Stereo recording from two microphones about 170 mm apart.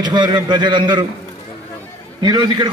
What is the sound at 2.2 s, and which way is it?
Speech, 25° right (ahead or behind).